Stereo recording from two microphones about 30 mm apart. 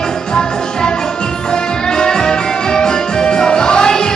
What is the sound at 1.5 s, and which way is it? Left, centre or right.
Music, left.